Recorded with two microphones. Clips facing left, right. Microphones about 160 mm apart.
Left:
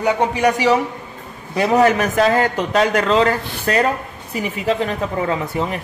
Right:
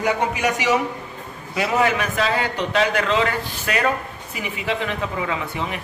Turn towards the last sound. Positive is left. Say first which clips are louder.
# left 5 dB
turn(degrees=40)  # may be behind; listen again after turning